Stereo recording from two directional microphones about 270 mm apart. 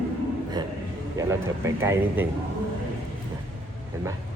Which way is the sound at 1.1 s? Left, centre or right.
Centre.